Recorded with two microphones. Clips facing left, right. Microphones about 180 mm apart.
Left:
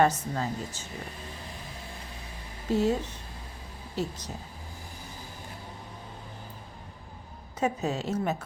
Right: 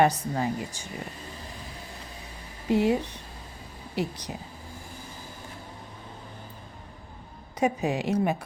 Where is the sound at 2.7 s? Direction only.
15° right (ahead or behind).